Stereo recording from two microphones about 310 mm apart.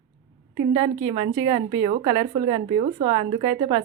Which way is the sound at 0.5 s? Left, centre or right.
Centre.